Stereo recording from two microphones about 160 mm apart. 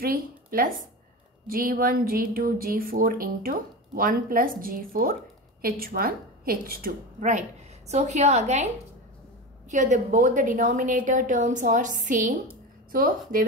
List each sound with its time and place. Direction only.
0.0 s a woman's voice: 65° right (ahead or behind); by 8.6 s 45° right (ahead or behind)
9.7 s a woman's voice: 50° right (ahead or behind)